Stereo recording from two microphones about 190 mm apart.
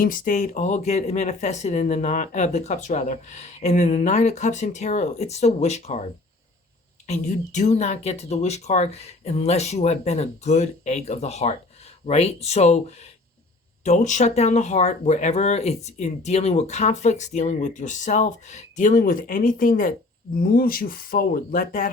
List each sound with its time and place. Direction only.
0.0 s speech: 45° left (ahead or behind)
7.1 s speech: 35° left (ahead or behind)